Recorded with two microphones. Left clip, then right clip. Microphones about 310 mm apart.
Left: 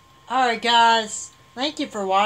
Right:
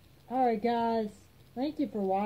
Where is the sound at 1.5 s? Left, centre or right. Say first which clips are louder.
Left 8 dB; left.